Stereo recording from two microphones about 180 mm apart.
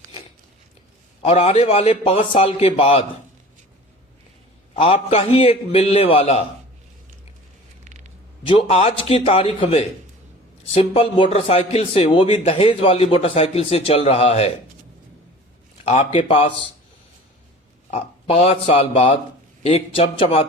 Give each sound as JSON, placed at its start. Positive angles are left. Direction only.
{"t": 1.2, "sound": "a man's voice", "side_deg": 35}
{"t": 4.7, "sound": "a man's voice", "side_deg": 30}
{"t": 8.4, "sound": "a man's voice", "side_deg": 35}
{"t": 15.8, "sound": "a man's voice", "side_deg": 35}
{"t": 17.9, "sound": "a man's voice", "side_deg": 35}